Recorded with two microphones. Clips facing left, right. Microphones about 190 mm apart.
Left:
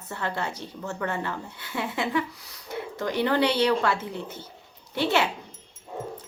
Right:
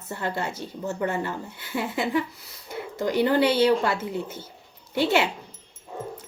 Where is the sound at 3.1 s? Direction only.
5° right (ahead or behind).